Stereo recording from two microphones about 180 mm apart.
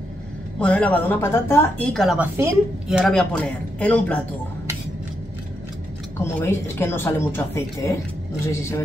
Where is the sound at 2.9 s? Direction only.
Centre (ahead or behind).